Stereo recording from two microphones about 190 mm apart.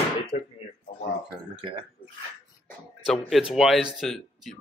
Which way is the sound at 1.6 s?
25° right (ahead or behind).